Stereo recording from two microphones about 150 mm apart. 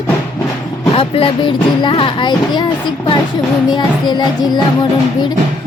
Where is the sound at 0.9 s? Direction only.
40° left (ahead or behind).